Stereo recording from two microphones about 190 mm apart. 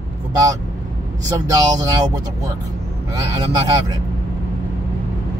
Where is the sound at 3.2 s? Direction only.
20° right (ahead or behind).